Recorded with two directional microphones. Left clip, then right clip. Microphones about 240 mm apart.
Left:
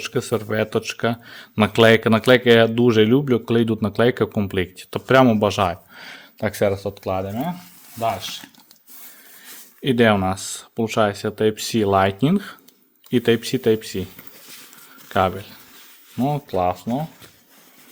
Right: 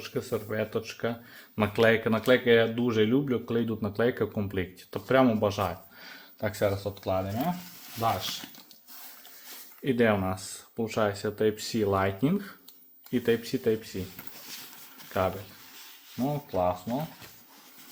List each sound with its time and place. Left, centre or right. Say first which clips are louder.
0.0 s speech: left 9 dB; left
9.8 s speech: left 8 dB; left
16.2 s speech: left 7 dB; left